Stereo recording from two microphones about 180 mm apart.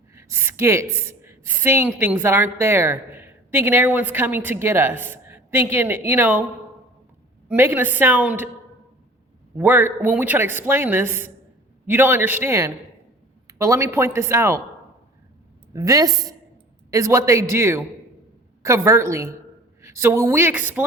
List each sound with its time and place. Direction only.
0.1 s a sound: 15° right (ahead or behind)
0.9 s a woman's voice: 15° right (ahead or behind)
7.4 s a woman's voice: 10° right (ahead or behind)
9.6 s a woman's voice: 10° right (ahead or behind)
15.7 s a woman's voice: 20° right (ahead or behind)